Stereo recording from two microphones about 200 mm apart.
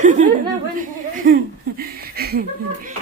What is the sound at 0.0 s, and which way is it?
Chuckle, 40° right (ahead or behind).